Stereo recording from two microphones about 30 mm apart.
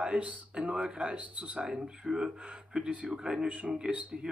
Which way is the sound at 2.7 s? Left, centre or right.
Right.